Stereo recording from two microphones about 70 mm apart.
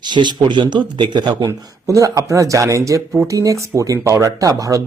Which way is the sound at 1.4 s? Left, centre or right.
Right.